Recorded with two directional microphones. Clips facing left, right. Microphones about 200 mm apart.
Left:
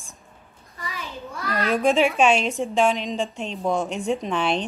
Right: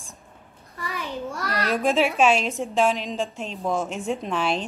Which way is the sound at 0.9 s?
60° right (ahead or behind).